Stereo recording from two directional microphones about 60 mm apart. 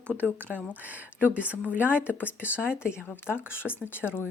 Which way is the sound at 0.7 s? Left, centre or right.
Right.